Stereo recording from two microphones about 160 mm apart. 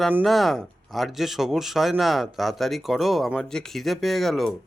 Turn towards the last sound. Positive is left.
turn(degrees=0)  # may be behind; listen again after turning